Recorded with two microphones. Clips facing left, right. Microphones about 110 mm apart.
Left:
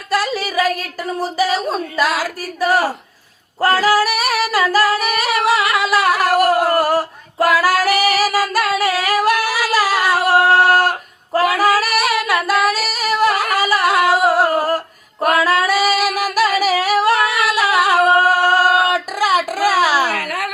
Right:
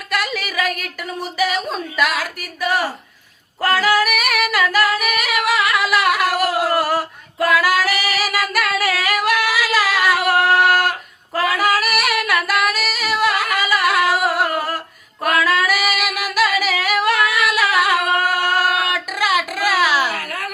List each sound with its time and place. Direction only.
0.1 s speech: 30° left (ahead or behind)
3.6 s singing: 35° left (ahead or behind)
11.3 s female singing: 35° left (ahead or behind)
15.4 s singing: 30° left (ahead or behind)
20.1 s a sound: 65° left (ahead or behind)